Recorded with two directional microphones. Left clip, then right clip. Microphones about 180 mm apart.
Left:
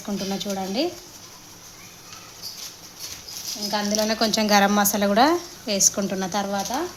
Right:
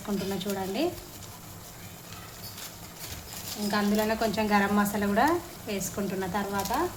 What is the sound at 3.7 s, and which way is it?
A woman's voice, 55° left (ahead or behind).